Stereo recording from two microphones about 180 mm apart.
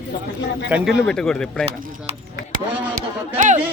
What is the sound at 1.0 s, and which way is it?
Speech, 5° left (ahead or behind).